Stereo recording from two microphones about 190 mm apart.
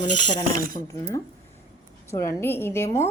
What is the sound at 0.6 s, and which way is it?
Speech, 45° right (ahead or behind).